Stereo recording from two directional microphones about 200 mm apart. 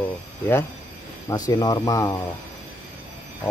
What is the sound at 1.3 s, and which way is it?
Speech, 15° left (ahead or behind).